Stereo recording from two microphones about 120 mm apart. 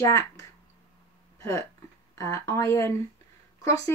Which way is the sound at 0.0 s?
25° left (ahead or behind).